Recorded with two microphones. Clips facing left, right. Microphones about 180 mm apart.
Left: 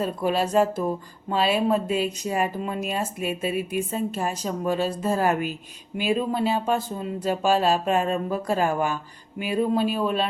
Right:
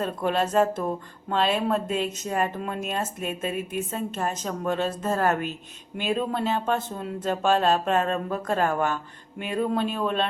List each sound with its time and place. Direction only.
0.0 s a woman's voice: 5° left (ahead or behind)